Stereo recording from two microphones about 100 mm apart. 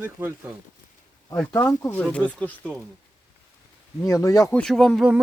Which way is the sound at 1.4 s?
15° left (ahead or behind).